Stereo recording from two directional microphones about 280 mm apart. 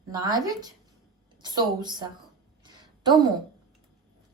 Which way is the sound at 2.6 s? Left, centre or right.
Centre.